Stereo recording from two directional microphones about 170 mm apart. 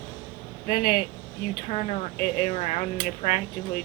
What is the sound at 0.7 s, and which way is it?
Speech, 50° left (ahead or behind).